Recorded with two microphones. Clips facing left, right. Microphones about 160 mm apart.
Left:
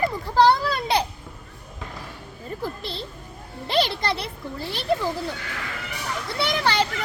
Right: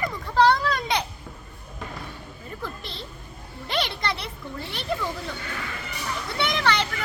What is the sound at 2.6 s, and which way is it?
A child's voice, 35° left (ahead or behind).